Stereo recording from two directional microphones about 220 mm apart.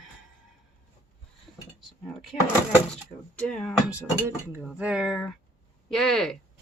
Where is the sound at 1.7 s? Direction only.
Centre (ahead or behind).